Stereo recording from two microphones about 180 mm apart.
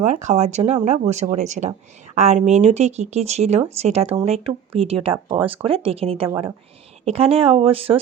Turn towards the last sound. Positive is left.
turn(degrees=-30)  # may be behind; listen again after turning